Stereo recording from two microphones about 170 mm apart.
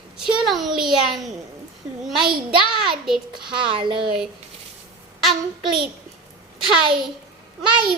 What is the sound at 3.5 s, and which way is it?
Speech, 30° right (ahead or behind).